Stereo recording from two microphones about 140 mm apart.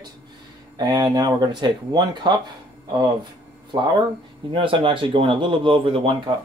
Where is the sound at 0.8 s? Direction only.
30° right (ahead or behind).